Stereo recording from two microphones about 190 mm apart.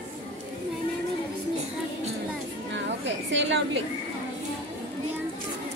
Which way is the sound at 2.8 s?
70° right (ahead or behind).